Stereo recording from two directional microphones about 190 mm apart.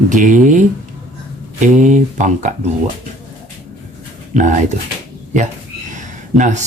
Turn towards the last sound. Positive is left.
turn(degrees=-40)  # may be behind; listen again after turning